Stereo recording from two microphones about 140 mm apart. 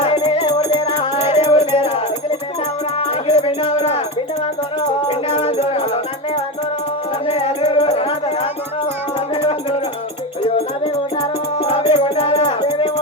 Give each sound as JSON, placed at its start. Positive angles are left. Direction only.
{"t": 0.0, "sound": "music", "side_deg": 50}
{"t": 3.3, "sound": "music", "side_deg": 40}
{"t": 5.0, "sound": "music", "side_deg": 45}
{"t": 7.3, "sound": "music", "side_deg": 50}
{"t": 11.6, "sound": "music", "side_deg": 45}